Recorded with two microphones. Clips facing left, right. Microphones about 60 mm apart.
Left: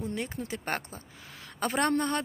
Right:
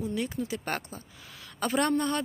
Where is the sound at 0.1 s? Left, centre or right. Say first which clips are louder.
Right 3 dB; left.